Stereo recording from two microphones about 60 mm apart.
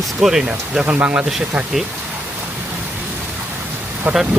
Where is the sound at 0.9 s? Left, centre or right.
Right.